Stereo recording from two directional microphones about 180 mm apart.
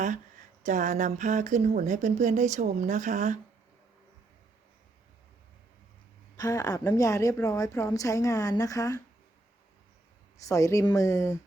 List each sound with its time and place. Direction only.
0.6 s speech: 45° right (ahead or behind)
6.3 s speech: 20° left (ahead or behind)
10.4 s speech: 15° left (ahead or behind)